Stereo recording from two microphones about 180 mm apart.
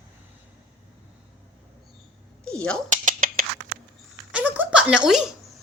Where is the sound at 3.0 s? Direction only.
50° right (ahead or behind).